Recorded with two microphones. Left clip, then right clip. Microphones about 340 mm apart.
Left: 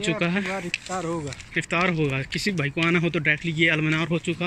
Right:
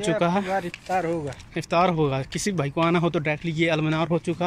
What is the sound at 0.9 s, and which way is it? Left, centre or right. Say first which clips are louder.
Speech: right 6 dB; right.